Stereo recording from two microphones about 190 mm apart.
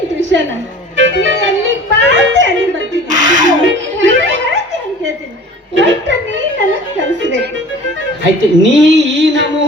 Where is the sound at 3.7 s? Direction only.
75° right (ahead or behind).